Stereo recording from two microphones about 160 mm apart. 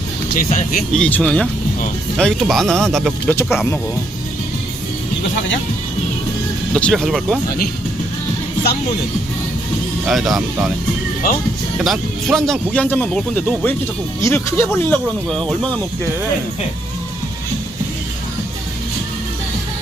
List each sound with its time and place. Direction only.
0.3 s speech: 55° left (ahead or behind)
0.9 s speech: 5° left (ahead or behind)
6.7 s speech: 5° left (ahead or behind)
10.1 s speech: centre (ahead or behind)
11.8 s speech: centre (ahead or behind)